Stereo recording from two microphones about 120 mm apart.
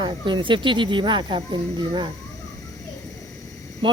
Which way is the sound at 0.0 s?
40° right (ahead or behind).